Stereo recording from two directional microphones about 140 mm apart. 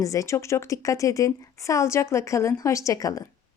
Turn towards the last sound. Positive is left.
turn(degrees=25)  # may be behind; listen again after turning